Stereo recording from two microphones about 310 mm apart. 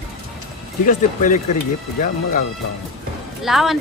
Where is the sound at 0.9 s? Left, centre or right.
Left.